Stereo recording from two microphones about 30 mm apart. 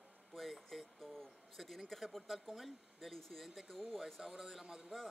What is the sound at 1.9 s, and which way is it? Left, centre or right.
Speech, centre.